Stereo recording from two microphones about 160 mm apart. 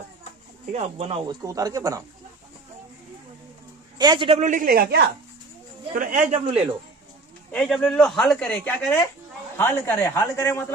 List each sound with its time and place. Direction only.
0.6 s speech: 45° right (ahead or behind); by 2.0 s 20° right (ahead or behind)
3.9 s a man's voice: 25° right (ahead or behind)
4.4 s speech: 50° right (ahead or behind); by 5.1 s 70° right (ahead or behind)
5.9 s speech: 55° right (ahead or behind)
6.4 s a man's voice: 35° right (ahead or behind)
7.5 s speech: 5° left (ahead or behind)